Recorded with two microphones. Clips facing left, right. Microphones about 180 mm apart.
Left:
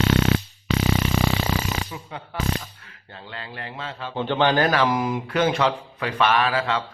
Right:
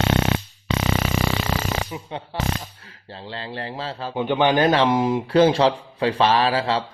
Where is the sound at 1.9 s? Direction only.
30° right (ahead or behind).